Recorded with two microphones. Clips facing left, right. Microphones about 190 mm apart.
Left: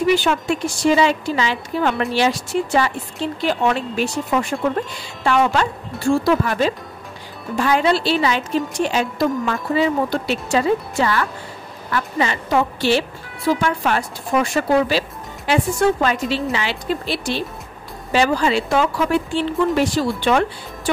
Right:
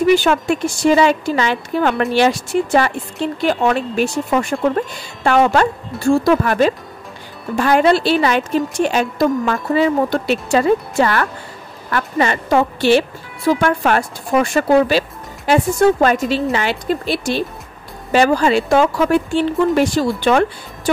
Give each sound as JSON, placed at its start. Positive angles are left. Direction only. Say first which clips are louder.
{"t": 0.0, "sound": "a woman's voice", "louder": "right 4 dB", "side_deg": -50}